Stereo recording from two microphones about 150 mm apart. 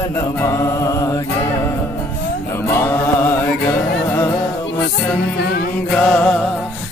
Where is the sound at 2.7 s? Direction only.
15° left (ahead or behind).